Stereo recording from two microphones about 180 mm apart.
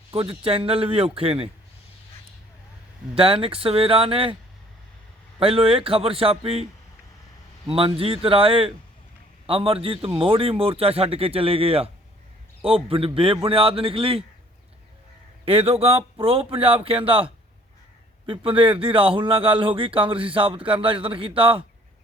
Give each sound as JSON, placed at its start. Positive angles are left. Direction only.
{"t": 0.1, "sound": "speech", "side_deg": -30}
{"t": 3.2, "sound": "speech", "side_deg": -30}
{"t": 5.4, "sound": "speech", "side_deg": -30}
{"t": 7.7, "sound": "speech", "side_deg": -30}
{"t": 15.4, "sound": "speech", "side_deg": -30}